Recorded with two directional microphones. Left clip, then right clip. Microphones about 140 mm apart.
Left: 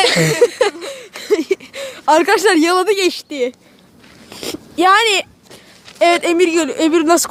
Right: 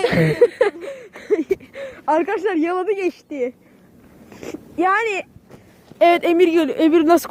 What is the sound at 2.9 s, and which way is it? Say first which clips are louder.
Speech: left 6 dB; 65° left (ahead or behind).